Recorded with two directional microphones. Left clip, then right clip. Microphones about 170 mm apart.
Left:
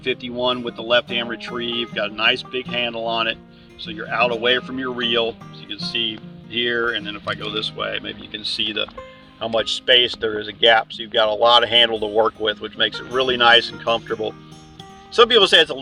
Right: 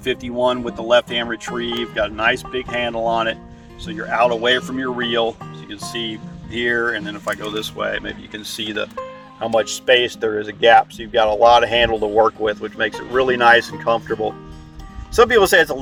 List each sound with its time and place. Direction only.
0.0 s speech: 10° right (ahead or behind); by 15.8 s 30° right (ahead or behind)